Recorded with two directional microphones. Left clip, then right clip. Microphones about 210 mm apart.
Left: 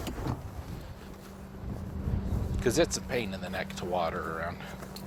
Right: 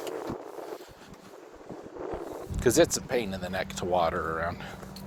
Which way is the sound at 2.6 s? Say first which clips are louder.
Right 4 dB; 50° right (ahead or behind).